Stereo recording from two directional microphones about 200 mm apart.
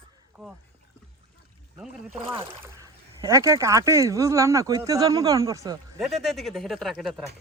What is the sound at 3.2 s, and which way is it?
Speech, 15° right (ahead or behind).